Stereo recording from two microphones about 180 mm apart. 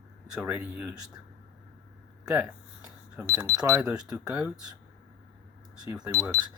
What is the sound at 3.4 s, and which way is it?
Speech, 20° right (ahead or behind).